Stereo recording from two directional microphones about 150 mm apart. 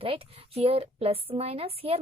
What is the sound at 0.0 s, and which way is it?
A woman's voice, 40° right (ahead or behind).